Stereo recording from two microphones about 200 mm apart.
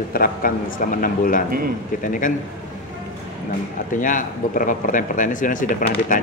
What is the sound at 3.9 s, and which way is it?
A man's voice, 40° left (ahead or behind).